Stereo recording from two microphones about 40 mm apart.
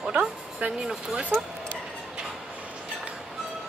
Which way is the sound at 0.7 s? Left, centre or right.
Centre.